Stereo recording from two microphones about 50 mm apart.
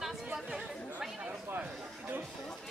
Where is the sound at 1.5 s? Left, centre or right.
Right.